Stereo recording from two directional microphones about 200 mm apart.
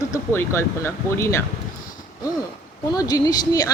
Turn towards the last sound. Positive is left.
turn(degrees=20)  # may be behind; listen again after turning